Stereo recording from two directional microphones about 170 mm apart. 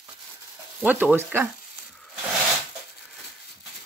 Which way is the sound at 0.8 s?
10° right (ahead or behind).